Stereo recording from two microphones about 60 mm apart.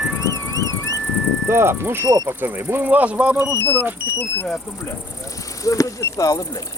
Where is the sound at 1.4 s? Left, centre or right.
Right.